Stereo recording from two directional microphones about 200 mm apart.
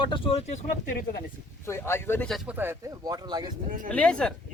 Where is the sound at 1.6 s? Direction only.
15° left (ahead or behind); by 3.5 s 20° right (ahead or behind).